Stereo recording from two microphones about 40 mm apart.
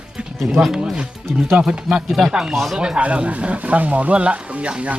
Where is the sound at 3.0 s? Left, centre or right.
Right.